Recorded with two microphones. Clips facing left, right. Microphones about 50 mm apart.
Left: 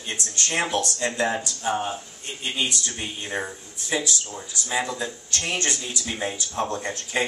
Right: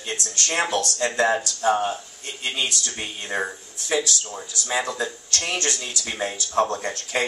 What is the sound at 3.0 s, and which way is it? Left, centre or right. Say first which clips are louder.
Speech: right 4 dB; right.